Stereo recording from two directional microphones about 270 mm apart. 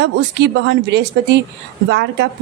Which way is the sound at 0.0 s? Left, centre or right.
Right.